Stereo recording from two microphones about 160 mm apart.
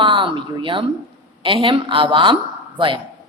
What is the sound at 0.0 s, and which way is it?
A woman's voice, 30° right (ahead or behind).